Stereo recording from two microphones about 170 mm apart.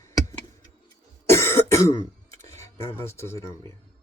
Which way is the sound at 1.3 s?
15° left (ahead or behind).